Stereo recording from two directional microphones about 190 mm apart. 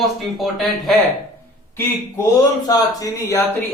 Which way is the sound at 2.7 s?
20° left (ahead or behind).